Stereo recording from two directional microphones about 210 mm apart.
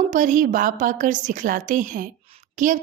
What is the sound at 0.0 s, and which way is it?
A woman's voice, 35° right (ahead or behind).